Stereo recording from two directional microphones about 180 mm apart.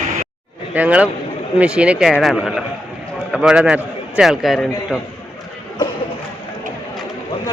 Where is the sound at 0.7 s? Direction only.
5° right (ahead or behind).